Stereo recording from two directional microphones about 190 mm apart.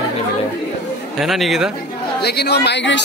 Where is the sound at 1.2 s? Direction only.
Centre (ahead or behind).